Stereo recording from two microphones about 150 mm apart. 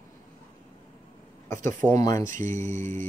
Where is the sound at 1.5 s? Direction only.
20° left (ahead or behind).